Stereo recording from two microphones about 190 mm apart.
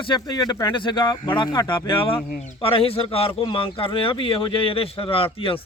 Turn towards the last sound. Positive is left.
turn(degrees=30)  # may be behind; listen again after turning